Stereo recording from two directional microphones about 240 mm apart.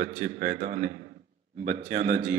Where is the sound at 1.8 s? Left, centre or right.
Right.